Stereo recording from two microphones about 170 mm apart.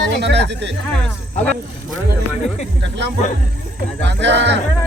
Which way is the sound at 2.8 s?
90° right.